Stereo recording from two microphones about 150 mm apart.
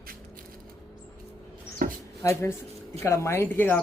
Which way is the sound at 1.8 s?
70° right (ahead or behind).